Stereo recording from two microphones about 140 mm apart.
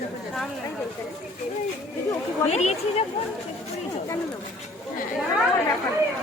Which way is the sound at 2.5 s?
50° left (ahead or behind).